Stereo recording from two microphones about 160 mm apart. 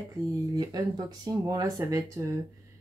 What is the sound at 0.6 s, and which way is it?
Speech, 25° right (ahead or behind).